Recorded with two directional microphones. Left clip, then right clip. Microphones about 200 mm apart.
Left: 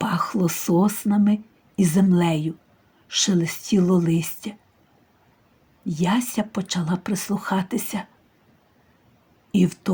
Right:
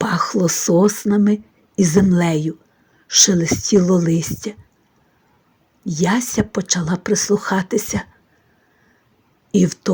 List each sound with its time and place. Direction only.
0.0 s speech: 25° right (ahead or behind)
5.8 s speech: 30° right (ahead or behind)
9.5 s speech: 25° right (ahead or behind)